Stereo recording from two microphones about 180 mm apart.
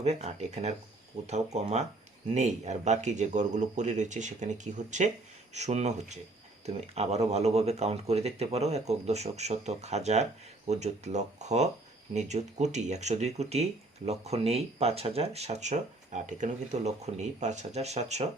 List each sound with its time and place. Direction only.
0.0 s speech: 35° right (ahead or behind)